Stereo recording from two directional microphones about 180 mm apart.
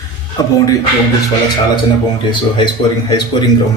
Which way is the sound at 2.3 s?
25° left (ahead or behind).